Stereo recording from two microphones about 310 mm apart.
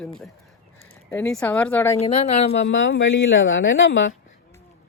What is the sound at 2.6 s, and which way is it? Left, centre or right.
Speech, left.